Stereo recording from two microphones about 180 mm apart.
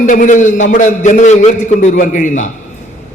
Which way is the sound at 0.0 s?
45° left (ahead or behind).